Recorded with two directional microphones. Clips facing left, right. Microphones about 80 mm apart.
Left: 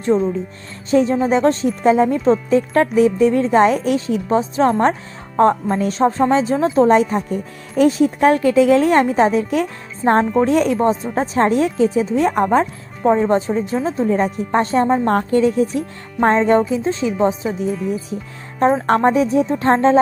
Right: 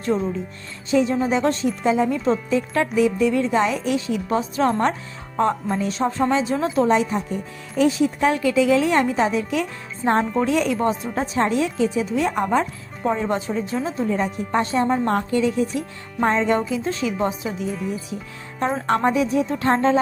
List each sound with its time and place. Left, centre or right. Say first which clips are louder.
0.0 s speech: left 6 dB; left
0.9 s speech: left 4 dB; left
1.4 s speech: left 5 dB; left
5.4 s a woman's voice: left 6 dB; left
10.0 s speech: left 5 dB; centre
10.4 s a woman's voice: left 5 dB; left
18.6 s speech: left 6 dB; left